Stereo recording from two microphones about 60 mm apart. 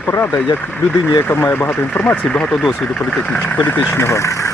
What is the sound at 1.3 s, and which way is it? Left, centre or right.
Speech, left.